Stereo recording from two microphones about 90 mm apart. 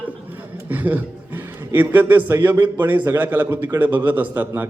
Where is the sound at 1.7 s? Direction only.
20° right (ahead or behind).